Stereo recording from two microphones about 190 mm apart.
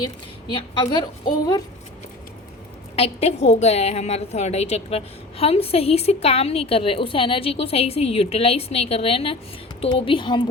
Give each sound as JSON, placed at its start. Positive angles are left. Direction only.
{"t": 0.0, "sound": "a woman's voice", "side_deg": 20}
{"t": 2.9, "sound": "a woman's voice", "side_deg": 30}